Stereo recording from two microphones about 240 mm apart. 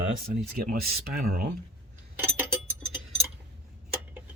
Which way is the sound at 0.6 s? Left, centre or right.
Right.